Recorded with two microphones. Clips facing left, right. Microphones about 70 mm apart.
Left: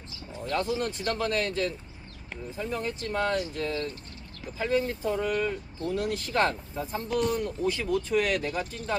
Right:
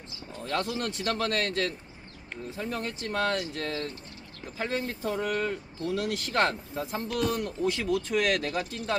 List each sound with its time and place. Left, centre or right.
0.4 s speech: right
5.9 s speech: right